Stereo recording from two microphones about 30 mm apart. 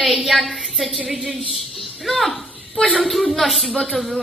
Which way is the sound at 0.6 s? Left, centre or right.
Centre.